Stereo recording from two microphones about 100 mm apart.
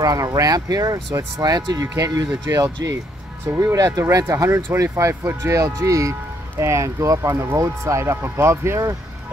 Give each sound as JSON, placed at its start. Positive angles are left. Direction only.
{"t": 0.0, "sound": "speech", "side_deg": -35}